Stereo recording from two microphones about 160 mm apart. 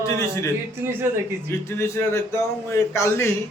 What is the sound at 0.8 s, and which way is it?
Speech, 15° right (ahead or behind).